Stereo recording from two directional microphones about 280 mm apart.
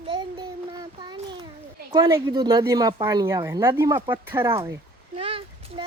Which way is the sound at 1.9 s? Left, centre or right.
Centre.